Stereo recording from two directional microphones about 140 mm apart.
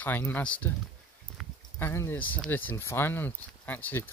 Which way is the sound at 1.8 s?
15° left (ahead or behind).